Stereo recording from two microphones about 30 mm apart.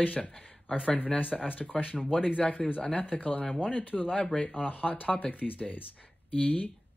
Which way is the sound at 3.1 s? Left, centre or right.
Left.